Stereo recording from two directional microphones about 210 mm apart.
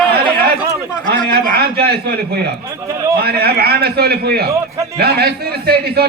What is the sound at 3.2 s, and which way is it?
A man's voice, 50° right (ahead or behind).